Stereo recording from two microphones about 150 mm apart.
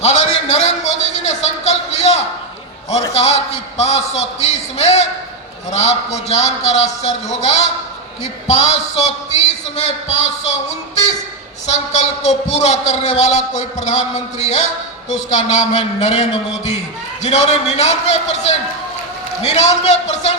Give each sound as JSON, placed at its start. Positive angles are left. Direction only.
{"t": 0.0, "sound": "a sound", "side_deg": 50}
{"t": 3.2, "sound": "a man's voice", "side_deg": 45}
{"t": 17.2, "sound": "a man's voice", "side_deg": 45}